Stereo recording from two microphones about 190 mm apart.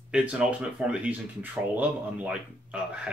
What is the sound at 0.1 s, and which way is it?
Speech, 5° right (ahead or behind).